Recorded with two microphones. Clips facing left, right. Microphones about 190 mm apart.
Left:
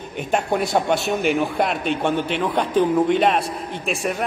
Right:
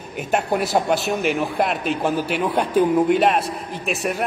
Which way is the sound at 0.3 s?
5° right (ahead or behind).